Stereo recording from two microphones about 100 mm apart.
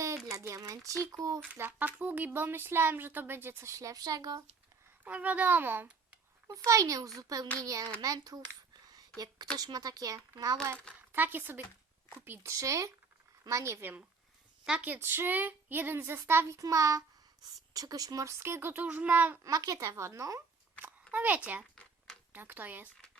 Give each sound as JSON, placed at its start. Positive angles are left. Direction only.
{"t": 0.3, "sound": "a child's voice", "side_deg": -35}
{"t": 1.5, "sound": "a woman's voice", "side_deg": -20}
{"t": 5.0, "sound": "a child's voice", "side_deg": -15}
{"t": 6.7, "sound": "a child's voice", "side_deg": -35}
{"t": 8.9, "sound": "a sound", "side_deg": -40}
{"t": 9.6, "sound": "a child's voice", "side_deg": -40}
{"t": 11.1, "sound": "a woman's voice", "side_deg": -20}
{"t": 14.6, "sound": "a woman's voice", "side_deg": -10}
{"t": 14.8, "sound": "a woman's voice", "side_deg": -20}
{"t": 16.6, "sound": "a child's voice", "side_deg": -35}
{"t": 19.5, "sound": "a child's voice", "side_deg": -40}
{"t": 21.1, "sound": "a child's voice", "side_deg": -15}
{"t": 21.8, "sound": "a sound", "side_deg": 5}
{"t": 22.3, "sound": "speech", "side_deg": -20}